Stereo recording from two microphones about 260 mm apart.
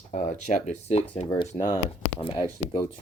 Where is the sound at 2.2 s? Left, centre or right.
Centre.